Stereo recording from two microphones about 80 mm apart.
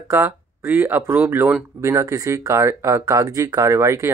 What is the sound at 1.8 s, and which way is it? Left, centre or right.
Speech, right.